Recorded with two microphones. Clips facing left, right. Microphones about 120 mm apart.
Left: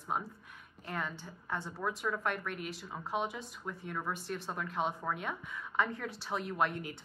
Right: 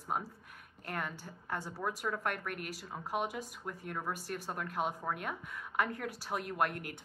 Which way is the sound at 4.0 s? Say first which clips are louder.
Left 1 dB; 5° right (ahead or behind).